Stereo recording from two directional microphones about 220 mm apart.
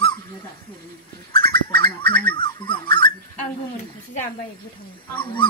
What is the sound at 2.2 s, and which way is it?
Speech, 20° left (ahead or behind).